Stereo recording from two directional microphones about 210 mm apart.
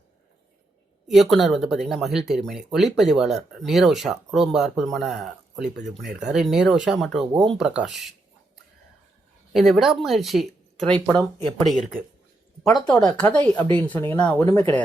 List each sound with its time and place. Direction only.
1.0 s speech: centre (ahead or behind)
9.5 s speech: centre (ahead or behind)
11.2 s speech: 20° right (ahead or behind)
11.6 s speech: centre (ahead or behind)
13.1 s speech: 5° left (ahead or behind)